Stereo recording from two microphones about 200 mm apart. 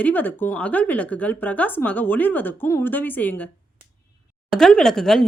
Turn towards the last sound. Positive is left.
turn(degrees=0)  # may be behind; listen again after turning